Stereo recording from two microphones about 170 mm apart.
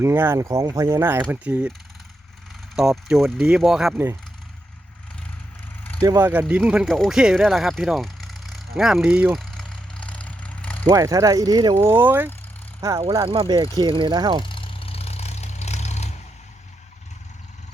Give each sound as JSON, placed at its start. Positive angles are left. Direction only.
{"t": 0.0, "sound": "speech", "side_deg": -15}
{"t": 2.7, "sound": "speech", "side_deg": -5}
{"t": 3.9, "sound": "speech", "side_deg": -15}
{"t": 6.0, "sound": "speech", "side_deg": -20}
{"t": 6.4, "sound": "a sound", "side_deg": -5}
{"t": 10.8, "sound": "speech", "side_deg": -20}
{"t": 11.9, "sound": "speech", "side_deg": -10}
{"t": 13.0, "sound": "speech", "side_deg": -35}
{"t": 14.4, "sound": "vehicle", "side_deg": 30}